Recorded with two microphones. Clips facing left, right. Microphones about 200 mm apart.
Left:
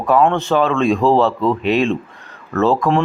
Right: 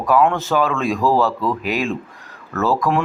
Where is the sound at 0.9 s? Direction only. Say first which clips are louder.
Left 3 dB; 25° left (ahead or behind).